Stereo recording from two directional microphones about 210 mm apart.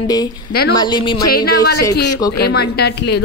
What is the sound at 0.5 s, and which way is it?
Speech, 45° left (ahead or behind).